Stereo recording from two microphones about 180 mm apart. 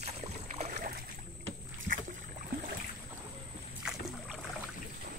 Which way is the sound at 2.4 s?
55° right (ahead or behind).